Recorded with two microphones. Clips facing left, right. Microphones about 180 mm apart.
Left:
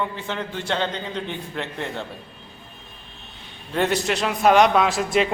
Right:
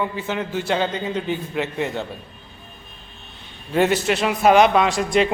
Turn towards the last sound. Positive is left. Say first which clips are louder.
# right 2 dB
turn(degrees=0)  # may be behind; listen again after turning